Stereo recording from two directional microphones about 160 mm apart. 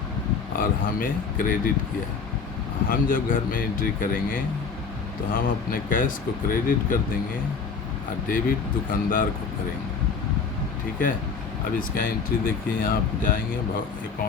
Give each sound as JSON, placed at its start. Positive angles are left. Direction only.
{"t": 0.6, "sound": "speech", "side_deg": 60}
{"t": 2.9, "sound": "speech", "side_deg": 60}
{"t": 8.3, "sound": "speech", "side_deg": 60}
{"t": 11.8, "sound": "speech", "side_deg": 65}